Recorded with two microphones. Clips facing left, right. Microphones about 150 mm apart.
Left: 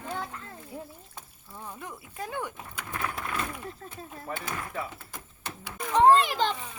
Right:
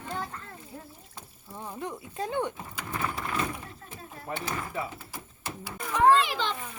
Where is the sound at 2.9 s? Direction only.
Centre (ahead or behind).